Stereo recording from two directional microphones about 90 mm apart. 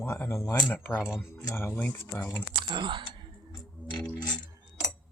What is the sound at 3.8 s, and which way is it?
Mechanisms, 15° left (ahead or behind).